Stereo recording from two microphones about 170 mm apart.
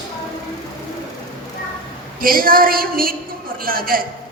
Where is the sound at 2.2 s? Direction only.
60° right (ahead or behind).